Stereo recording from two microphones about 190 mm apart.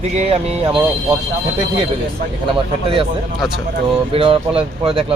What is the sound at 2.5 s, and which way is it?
Speech, 25° right (ahead or behind).